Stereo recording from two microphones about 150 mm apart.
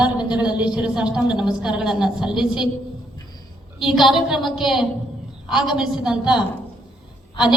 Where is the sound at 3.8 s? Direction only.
5° right (ahead or behind).